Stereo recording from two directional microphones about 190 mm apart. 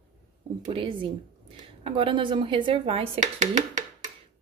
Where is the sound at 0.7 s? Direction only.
25° right (ahead or behind).